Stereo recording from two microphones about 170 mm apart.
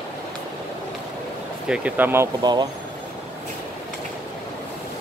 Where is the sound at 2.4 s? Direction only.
25° right (ahead or behind).